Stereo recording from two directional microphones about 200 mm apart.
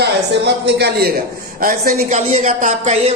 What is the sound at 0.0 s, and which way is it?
Speech, 55° right (ahead or behind).